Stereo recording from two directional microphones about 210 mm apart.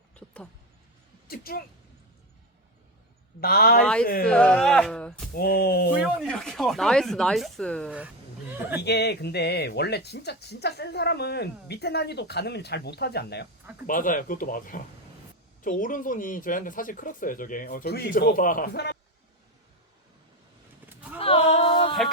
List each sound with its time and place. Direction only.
1.3 s speech: 45° left (ahead or behind)
3.4 s speech: 45° left (ahead or behind)
4.3 s speech: 5° left (ahead or behind)
5.3 s speech: 45° left (ahead or behind)
6.0 s speech: 5° left (ahead or behind)
7.9 s speech: 10° right (ahead or behind)
8.8 s speech: 50° left (ahead or behind)
13.8 s speech: 40° left (ahead or behind)
20.9 s horse: 5° right (ahead or behind)
21.2 s a sound: 25° left (ahead or behind)